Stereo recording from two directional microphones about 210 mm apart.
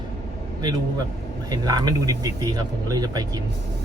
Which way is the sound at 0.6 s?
20° right (ahead or behind).